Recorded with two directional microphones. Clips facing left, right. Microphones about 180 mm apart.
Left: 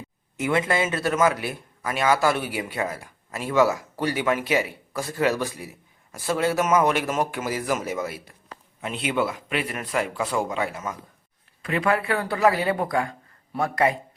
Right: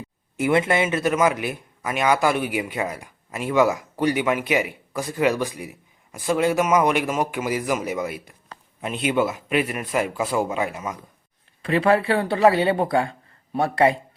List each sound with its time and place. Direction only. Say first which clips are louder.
0.3 s a man's voice: right 3 dB; 30° right (ahead or behind)
11.6 s speech: right 5 dB; 30° right (ahead or behind)